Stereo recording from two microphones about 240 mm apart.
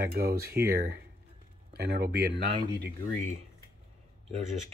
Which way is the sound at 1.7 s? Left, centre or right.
Right.